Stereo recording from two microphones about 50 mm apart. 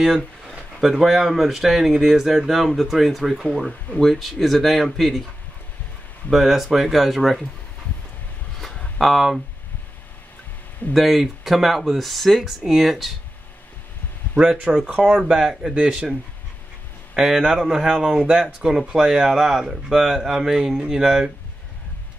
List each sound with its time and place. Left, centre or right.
0.5 s speech: centre
6.3 s speech: centre
8.5 s a sound: centre
9.0 s speech: centre
10.9 s speech: centre
14.9 s speech: right
15.1 s speech: centre